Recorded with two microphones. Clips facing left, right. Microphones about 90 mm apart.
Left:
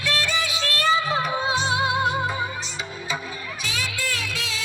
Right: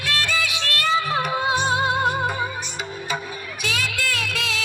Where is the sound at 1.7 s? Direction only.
40° right (ahead or behind).